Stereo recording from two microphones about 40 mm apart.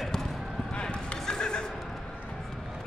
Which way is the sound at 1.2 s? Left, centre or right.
Centre.